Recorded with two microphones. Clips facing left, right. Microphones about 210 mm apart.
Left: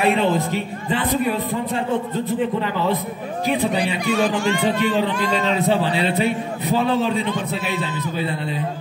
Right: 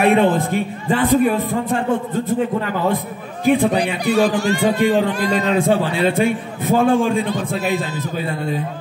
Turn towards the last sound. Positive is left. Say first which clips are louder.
# right 4 dB
turn(degrees=-45)  # may be behind; listen again after turning